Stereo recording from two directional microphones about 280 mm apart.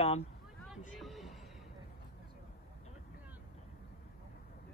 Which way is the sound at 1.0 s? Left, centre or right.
Centre.